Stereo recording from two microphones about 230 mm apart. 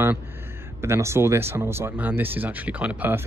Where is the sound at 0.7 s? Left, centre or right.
Centre.